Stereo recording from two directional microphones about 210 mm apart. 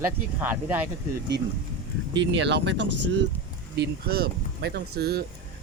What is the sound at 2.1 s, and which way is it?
Speech, 55° right (ahead or behind).